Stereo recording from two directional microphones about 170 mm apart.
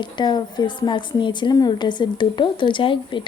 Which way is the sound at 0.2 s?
25° left (ahead or behind).